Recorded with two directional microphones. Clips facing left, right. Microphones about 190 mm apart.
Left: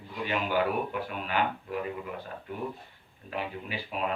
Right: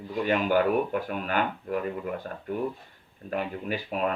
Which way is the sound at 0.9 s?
50° right (ahead or behind).